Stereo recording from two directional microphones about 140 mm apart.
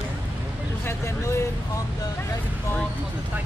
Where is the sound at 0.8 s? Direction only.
20° left (ahead or behind).